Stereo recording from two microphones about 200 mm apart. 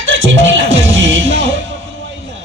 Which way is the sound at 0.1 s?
70° right (ahead or behind).